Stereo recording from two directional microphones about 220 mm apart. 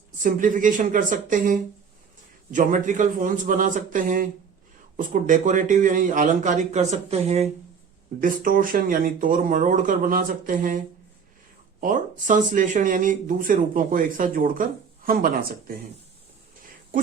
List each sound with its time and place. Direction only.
0.2 s speech: 35° right (ahead or behind)
11.8 s speech: 35° right (ahead or behind)